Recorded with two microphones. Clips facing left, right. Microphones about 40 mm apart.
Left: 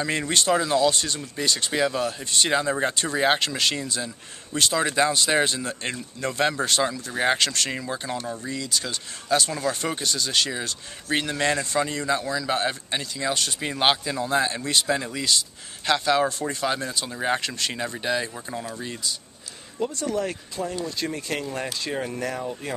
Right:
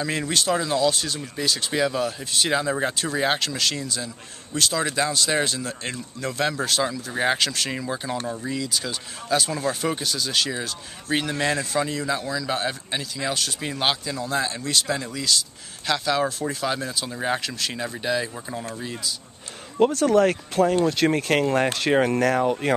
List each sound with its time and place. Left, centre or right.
0.0 s speech: centre
19.8 s speech: right